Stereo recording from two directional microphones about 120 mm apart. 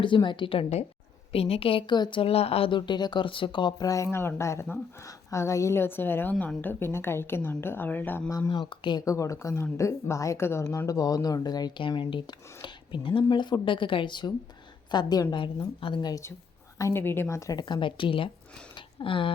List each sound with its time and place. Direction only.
0.0 s a woman's voice: 40° left (ahead or behind); by 8.3 s 15° left (ahead or behind)
8.3 s a woman's voice: 30° left (ahead or behind)
9.0 s a woman's voice: 25° left (ahead or behind)
16.7 s a woman's voice: 25° left (ahead or behind); by 19.3 s 45° left (ahead or behind)